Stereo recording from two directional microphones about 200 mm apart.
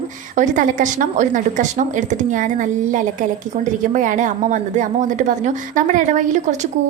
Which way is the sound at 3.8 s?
40° right (ahead or behind).